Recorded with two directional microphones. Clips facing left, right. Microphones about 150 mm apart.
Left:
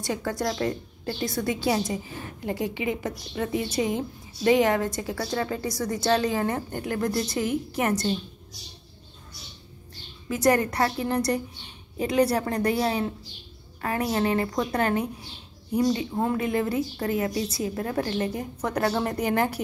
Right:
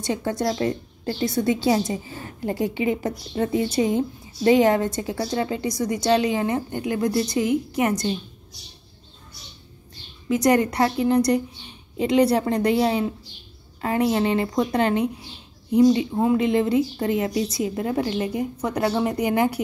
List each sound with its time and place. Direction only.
0.0 s a woman's voice: 25° right (ahead or behind)
10.2 s a woman's voice: 15° right (ahead or behind)
16.3 s a woman's voice: 20° right (ahead or behind)